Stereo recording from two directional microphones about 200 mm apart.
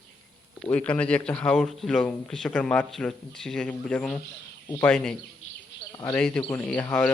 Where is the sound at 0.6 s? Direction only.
5° left (ahead or behind).